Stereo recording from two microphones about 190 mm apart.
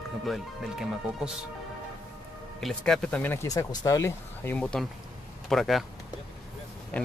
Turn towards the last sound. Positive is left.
turn(degrees=5)  # may be behind; listen again after turning